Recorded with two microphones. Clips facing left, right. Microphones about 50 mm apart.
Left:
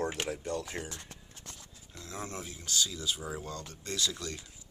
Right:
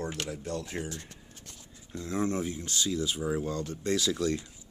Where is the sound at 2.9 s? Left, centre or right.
Right.